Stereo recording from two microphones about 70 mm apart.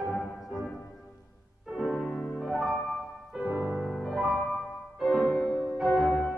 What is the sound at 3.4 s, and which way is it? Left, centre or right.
Music, right.